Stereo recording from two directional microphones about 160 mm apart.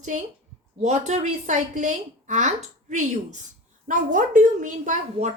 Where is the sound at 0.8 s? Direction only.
45° right (ahead or behind).